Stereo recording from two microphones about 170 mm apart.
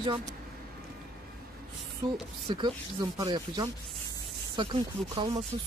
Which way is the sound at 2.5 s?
25° right (ahead or behind).